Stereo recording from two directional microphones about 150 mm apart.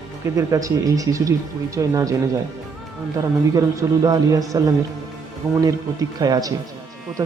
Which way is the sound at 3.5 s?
20° right (ahead or behind).